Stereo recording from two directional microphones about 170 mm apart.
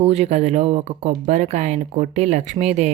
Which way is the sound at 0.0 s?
40° right (ahead or behind).